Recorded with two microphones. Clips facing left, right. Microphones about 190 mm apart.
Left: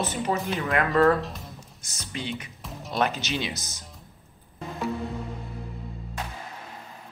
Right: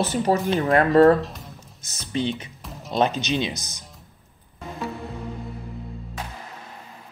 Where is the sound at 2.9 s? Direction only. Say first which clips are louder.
Right 5 dB; 20° right (ahead or behind).